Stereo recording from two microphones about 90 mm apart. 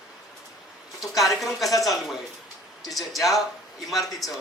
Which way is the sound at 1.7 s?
40° left (ahead or behind).